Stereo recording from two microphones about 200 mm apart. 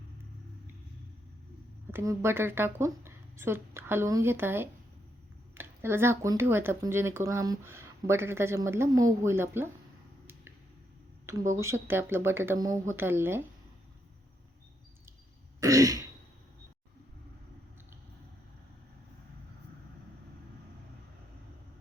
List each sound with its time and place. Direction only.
1.9 s speech: 10° right (ahead or behind)
11.3 s speech: 15° right (ahead or behind)
15.6 s throat clearing: 15° right (ahead or behind)